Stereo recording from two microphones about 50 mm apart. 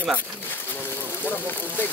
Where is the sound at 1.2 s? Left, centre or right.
Left.